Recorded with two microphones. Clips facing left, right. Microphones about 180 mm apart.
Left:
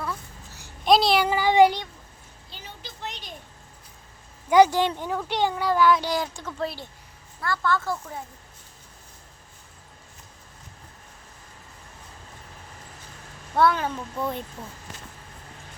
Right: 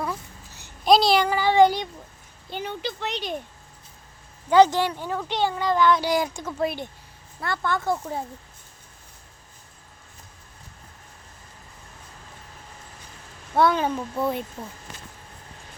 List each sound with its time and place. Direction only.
0.0 s a sound: 20° right (ahead or behind)
0.9 s child singing: centre (ahead or behind)
1.3 s child singing: 15° left (ahead or behind)
2.5 s speech: 60° right (ahead or behind); by 3.3 s 75° right (ahead or behind)
4.4 s speech: 10° left (ahead or behind)
6.0 s speech: 10° right (ahead or behind)
13.6 s speech: 20° right (ahead or behind)
14.2 s speech: 10° right (ahead or behind)